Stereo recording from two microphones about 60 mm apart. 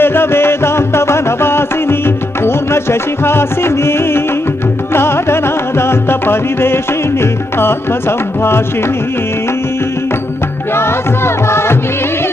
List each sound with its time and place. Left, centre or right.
0.0 s music: left
10.8 s music: left